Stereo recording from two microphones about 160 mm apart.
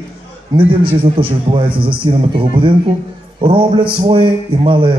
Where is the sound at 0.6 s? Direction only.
35° right (ahead or behind).